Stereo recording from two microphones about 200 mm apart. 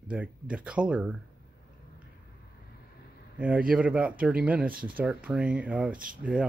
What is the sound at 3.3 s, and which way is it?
Speech, 5° right (ahead or behind).